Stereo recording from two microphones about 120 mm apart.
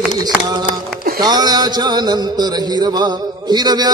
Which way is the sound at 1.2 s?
35° right (ahead or behind).